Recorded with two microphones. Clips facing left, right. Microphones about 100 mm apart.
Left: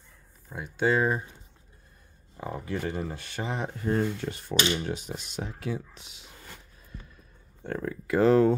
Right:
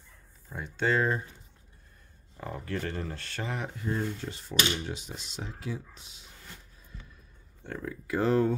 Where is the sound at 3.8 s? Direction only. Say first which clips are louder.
Left 7 dB; 60° left (ahead or behind).